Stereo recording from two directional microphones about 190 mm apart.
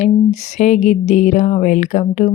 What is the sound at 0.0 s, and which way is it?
Speech, 35° left (ahead or behind).